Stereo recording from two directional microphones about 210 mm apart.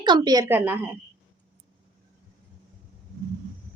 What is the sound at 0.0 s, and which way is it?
Speech, 20° right (ahead or behind).